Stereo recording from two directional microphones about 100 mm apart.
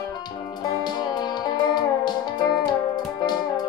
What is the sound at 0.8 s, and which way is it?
Music, 45° left (ahead or behind).